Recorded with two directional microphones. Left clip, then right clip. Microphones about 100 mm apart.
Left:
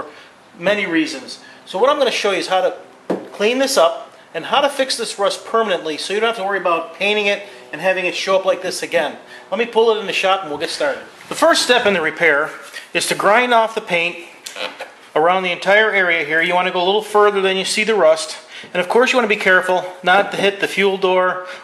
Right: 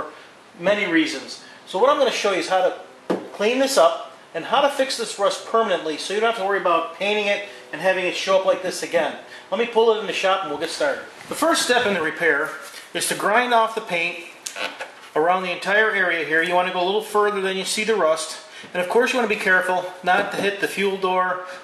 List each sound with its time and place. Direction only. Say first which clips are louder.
0.6 s speech: left 2 dB; 5° left (ahead or behind)
15.1 s speech: left 5 dB; 15° left (ahead or behind)